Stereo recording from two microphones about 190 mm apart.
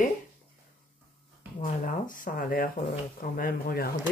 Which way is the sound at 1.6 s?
45° left (ahead or behind).